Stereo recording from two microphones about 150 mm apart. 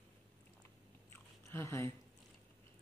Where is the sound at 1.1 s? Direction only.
15° left (ahead or behind).